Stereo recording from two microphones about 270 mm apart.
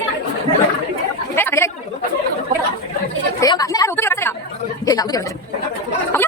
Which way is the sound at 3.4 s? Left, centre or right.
Centre.